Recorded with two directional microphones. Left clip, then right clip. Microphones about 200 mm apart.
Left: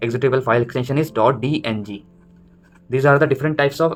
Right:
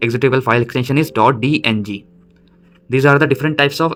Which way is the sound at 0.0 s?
35° right (ahead or behind).